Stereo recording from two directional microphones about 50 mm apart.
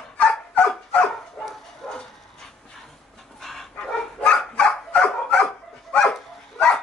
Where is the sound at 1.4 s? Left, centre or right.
Left.